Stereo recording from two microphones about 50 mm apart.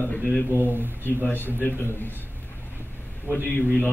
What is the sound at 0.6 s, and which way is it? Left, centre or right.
Speech, right.